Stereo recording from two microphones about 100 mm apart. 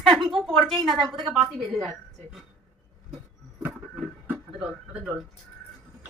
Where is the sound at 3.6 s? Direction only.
15° right (ahead or behind).